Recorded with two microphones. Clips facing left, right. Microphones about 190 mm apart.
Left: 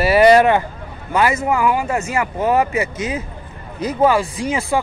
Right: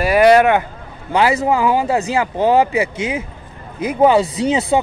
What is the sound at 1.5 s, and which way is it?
Speech, 20° right (ahead or behind).